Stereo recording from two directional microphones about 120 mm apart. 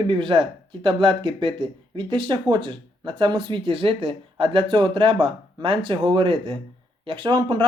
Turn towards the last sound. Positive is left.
turn(degrees=-40)  # may be behind; listen again after turning